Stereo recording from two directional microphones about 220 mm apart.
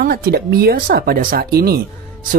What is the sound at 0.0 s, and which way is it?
Speech, 40° right (ahead or behind).